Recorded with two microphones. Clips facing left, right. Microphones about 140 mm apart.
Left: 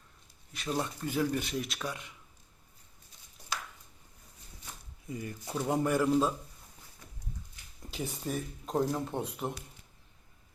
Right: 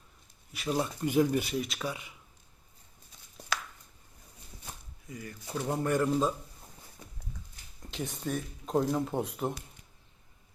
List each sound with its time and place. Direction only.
0.5 s speech: 5° right (ahead or behind)
1.0 s speech: 15° right (ahead or behind)
1.5 s speech: centre (ahead or behind)
3.5 s a sound: 70° right (ahead or behind)
5.0 s speech: 25° left (ahead or behind)
5.5 s speech: 10° left (ahead or behind)
7.9 s speech: 5° left (ahead or behind)